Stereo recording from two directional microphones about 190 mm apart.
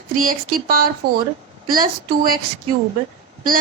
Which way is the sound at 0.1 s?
45° right (ahead or behind).